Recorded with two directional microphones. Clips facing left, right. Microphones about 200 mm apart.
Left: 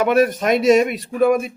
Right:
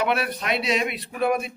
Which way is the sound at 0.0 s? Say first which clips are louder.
Left 9 dB; 45° left (ahead or behind).